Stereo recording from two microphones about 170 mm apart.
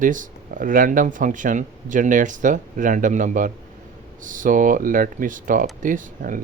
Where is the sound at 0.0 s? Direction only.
50° right (ahead or behind).